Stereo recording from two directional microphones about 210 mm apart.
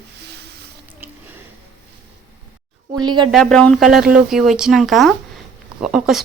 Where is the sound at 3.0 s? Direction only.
20° right (ahead or behind).